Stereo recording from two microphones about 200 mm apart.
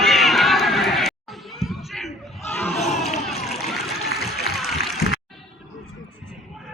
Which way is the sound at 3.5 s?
Centre (ahead or behind).